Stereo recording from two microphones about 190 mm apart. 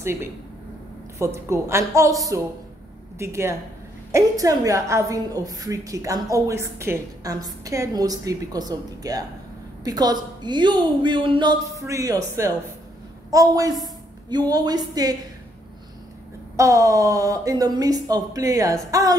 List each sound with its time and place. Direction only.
0.0 s a woman's voice: 15° right (ahead or behind)
16.5 s a woman's voice: 15° right (ahead or behind)